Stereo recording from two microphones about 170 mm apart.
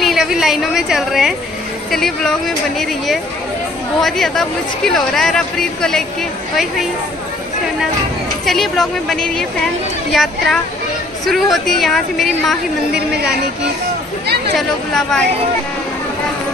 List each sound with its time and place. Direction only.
0.0 s speech: centre (ahead or behind)
8.5 s speech: centre (ahead or behind)
14.2 s a sound: 70° right (ahead or behind)
14.5 s speech: 5° left (ahead or behind)